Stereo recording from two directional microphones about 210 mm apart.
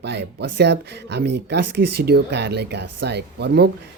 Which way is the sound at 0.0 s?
50° right (ahead or behind).